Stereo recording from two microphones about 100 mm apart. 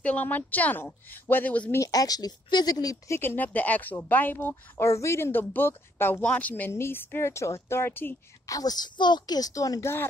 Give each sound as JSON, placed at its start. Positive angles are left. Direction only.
{"t": 0.0, "sound": "a woman's voice", "side_deg": 15}
{"t": 1.8, "sound": "a woman's voice", "side_deg": 40}
{"t": 3.2, "sound": "speech", "side_deg": 20}
{"t": 8.5, "sound": "a woman's voice", "side_deg": 40}